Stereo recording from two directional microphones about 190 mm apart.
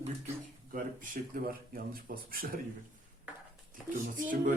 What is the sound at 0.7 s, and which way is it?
Speech, 45° right (ahead or behind).